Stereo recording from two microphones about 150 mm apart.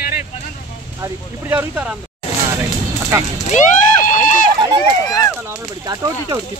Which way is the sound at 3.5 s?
55° left (ahead or behind).